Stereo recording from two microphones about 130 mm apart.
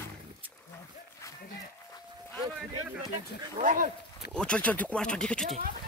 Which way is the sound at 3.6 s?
90° right.